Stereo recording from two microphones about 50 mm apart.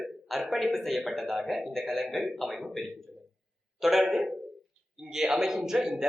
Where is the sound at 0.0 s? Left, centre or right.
Centre.